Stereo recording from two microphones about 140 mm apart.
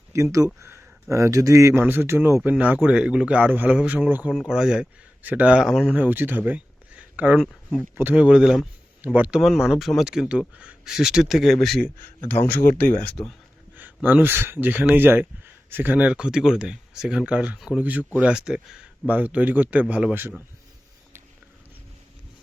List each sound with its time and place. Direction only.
0.1 s speech: 20° right (ahead or behind)
7.4 s speech: centre (ahead or behind)
7.9 s speech: 10° right (ahead or behind)
12.5 s speech: 90° left
13.7 s speech: 15° right (ahead or behind)